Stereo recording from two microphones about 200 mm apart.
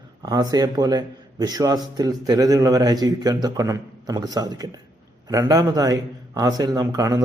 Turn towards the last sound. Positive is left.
turn(degrees=-15)  # may be behind; listen again after turning